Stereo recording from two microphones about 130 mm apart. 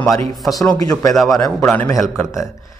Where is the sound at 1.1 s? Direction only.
Centre (ahead or behind).